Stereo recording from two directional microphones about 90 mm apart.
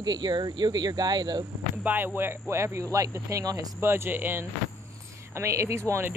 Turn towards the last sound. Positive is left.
turn(degrees=-30)  # may be behind; listen again after turning